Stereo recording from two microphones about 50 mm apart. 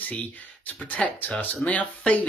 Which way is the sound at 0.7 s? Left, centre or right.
Left.